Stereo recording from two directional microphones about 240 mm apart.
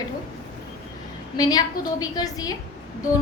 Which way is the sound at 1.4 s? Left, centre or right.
Centre.